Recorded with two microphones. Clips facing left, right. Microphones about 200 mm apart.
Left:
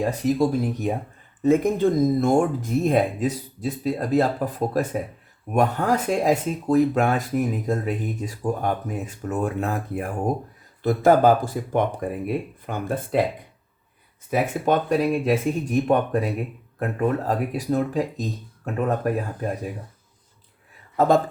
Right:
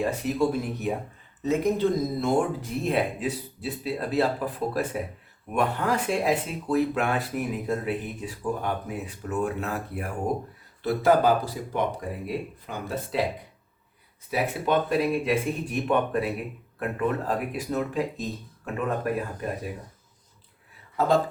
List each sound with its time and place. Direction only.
0.0 s speech: 40° left (ahead or behind)
1.4 s speech: 50° left (ahead or behind)
14.3 s speech: 45° left (ahead or behind)